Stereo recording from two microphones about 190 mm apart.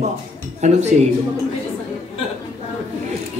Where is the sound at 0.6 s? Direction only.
35° right (ahead or behind).